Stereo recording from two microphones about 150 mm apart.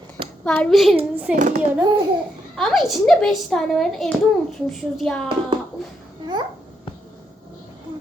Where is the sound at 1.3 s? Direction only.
55° right (ahead or behind).